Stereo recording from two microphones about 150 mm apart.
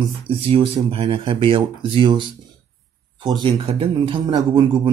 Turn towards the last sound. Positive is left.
turn(degrees=-30)  # may be behind; listen again after turning